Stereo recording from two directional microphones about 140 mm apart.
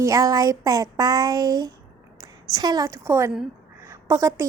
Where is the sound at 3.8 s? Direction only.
20° right (ahead or behind).